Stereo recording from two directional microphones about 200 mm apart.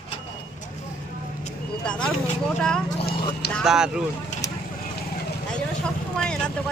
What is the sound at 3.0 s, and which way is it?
Clip-clop, 25° left (ahead or behind).